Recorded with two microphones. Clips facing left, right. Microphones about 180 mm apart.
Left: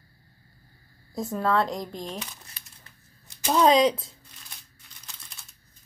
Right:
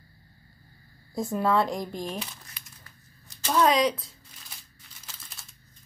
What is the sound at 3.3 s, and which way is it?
Speech, 15° left (ahead or behind).